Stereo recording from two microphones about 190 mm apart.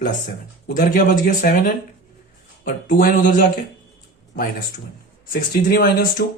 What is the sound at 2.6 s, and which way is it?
Speech, 45° left (ahead or behind).